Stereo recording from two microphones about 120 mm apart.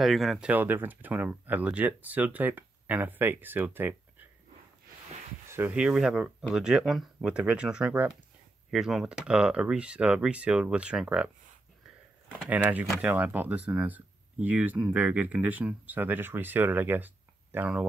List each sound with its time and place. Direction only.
0.0 s speech: centre (ahead or behind)
0.5 s speech: 15° right (ahead or behind)
5.5 s speech: 20° right (ahead or behind)
5.8 s speech: 5° right (ahead or behind)
12.4 s speech: 15° right (ahead or behind)